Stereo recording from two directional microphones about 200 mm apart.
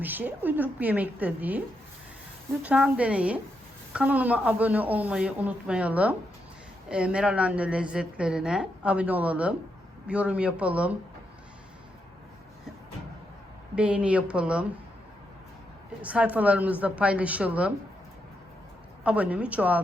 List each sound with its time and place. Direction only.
0.0 s speech: 10° right (ahead or behind)
2.6 s a woman's voice: 5° right (ahead or behind)
13.7 s a woman's voice: 5° right (ahead or behind)
16.0 s speech: 5° right (ahead or behind)
19.0 s speech: 5° right (ahead or behind)